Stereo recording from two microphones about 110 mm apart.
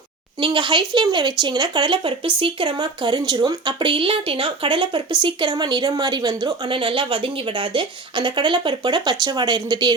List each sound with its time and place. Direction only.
0.4 s a woman's voice: 45° right (ahead or behind)